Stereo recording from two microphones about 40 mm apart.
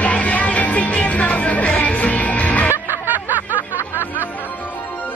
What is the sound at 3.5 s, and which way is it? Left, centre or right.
Music, left.